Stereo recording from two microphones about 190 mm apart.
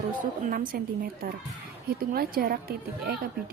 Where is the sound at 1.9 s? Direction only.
55° right (ahead or behind).